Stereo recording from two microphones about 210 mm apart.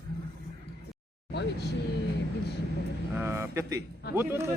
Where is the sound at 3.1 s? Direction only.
10° right (ahead or behind).